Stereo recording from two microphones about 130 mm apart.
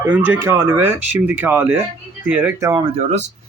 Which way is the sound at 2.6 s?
30° right (ahead or behind).